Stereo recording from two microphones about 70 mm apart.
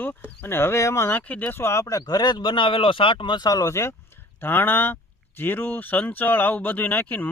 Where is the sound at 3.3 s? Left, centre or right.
Left.